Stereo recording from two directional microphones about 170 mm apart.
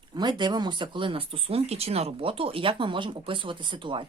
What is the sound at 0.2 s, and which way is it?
Speech, 25° right (ahead or behind).